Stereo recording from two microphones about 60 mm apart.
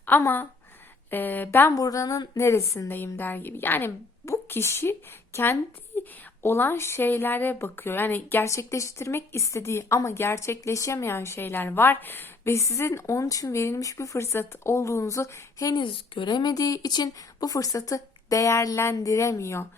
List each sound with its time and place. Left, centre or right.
0.1 s a woman's voice: left
1.7 s speech: left
2.9 s a woman's voice: left
5.9 s a sound: left
6.4 s a woman's voice: left
8.4 s a woman's voice: left
10.6 s a woman's voice: left
12.5 s speech: left
16.5 s speech: left